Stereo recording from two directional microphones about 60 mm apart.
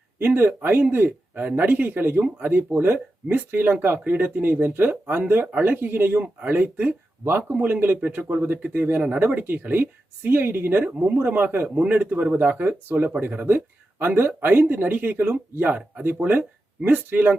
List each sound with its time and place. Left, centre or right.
0.3 s speech: right